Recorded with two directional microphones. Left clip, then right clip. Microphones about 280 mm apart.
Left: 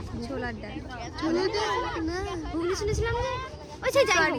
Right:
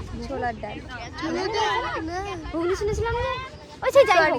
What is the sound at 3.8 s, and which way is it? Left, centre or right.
Speech, centre.